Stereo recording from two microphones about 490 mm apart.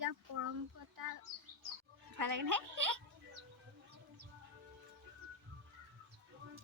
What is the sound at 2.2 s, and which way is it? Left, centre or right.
Speech, right.